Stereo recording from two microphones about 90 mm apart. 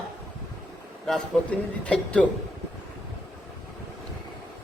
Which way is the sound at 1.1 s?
10° left (ahead or behind).